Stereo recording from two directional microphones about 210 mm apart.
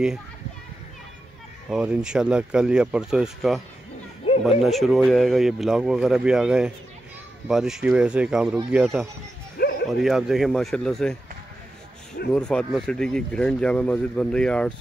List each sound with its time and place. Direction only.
1.7 s speech: 5° right (ahead or behind)
4.2 s chatter: 25° left (ahead or behind)
4.6 s speech: centre (ahead or behind)
9.6 s music: 50° left (ahead or behind)
10.0 s speech: centre (ahead or behind)
12.4 s speech: 5° left (ahead or behind)